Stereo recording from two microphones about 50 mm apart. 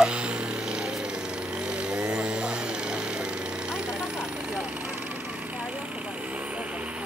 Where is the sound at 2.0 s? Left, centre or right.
Centre.